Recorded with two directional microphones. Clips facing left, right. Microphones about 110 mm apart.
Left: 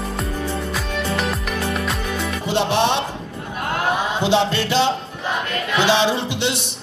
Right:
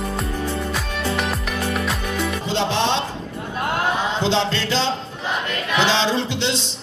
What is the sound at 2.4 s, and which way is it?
Music, 15° left (ahead or behind).